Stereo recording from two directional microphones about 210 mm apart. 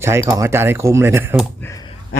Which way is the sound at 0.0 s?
10° right (ahead or behind).